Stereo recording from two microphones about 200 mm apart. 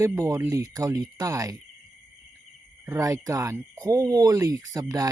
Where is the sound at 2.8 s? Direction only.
15° right (ahead or behind).